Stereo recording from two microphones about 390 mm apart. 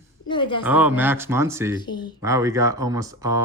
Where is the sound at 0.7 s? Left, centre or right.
Centre.